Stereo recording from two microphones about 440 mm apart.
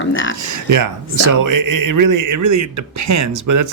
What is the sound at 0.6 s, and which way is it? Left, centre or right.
Speech, right.